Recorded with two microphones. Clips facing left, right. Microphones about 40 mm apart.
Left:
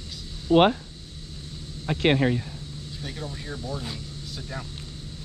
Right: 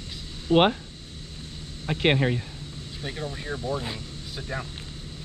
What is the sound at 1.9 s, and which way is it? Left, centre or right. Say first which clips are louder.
Speech: left 1 dB; centre.